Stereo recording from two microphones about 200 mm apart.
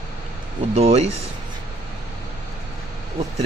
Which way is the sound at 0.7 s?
35° right (ahead or behind).